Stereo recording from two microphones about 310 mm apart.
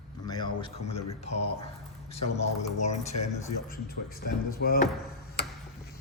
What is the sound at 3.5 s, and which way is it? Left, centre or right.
Speech, left.